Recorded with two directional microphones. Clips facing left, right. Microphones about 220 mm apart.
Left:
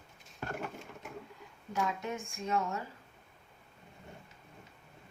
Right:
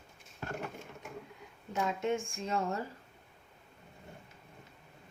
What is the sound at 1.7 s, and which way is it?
Speech, 25° right (ahead or behind).